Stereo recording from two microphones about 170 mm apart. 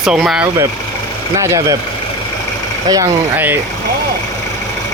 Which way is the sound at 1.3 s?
15° right (ahead or behind).